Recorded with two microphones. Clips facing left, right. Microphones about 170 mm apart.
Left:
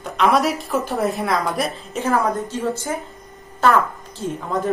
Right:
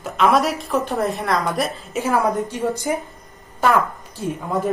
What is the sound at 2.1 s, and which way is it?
A woman's voice, 15° right (ahead or behind).